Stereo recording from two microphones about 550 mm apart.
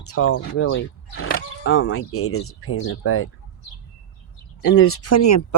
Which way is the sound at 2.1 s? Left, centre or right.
Left.